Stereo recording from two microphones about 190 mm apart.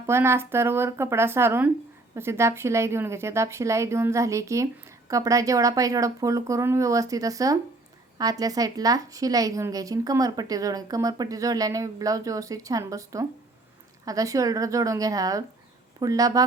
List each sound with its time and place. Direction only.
0.1 s a woman's voice: 15° right (ahead or behind)